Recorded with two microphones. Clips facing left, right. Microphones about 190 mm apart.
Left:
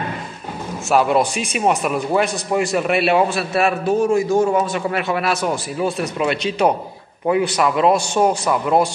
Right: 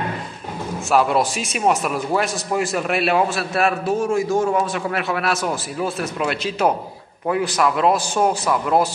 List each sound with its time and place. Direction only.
0.8 s a man's voice: centre (ahead or behind)